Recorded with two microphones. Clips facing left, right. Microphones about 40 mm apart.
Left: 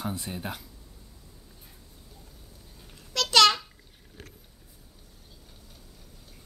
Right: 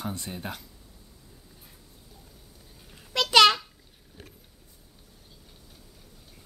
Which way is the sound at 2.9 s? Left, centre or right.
Centre.